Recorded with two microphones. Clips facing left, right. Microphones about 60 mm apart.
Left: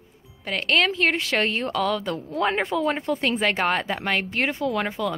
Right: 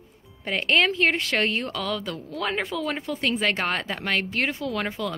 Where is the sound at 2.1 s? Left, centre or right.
Left.